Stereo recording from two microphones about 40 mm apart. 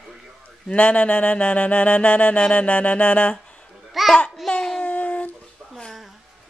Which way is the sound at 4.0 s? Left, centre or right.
Centre.